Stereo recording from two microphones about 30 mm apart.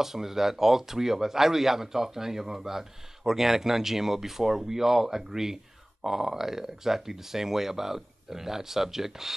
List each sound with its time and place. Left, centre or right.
0.0 s speech: centre